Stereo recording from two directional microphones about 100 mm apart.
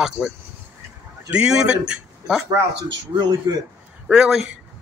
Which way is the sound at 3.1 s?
60° right (ahead or behind).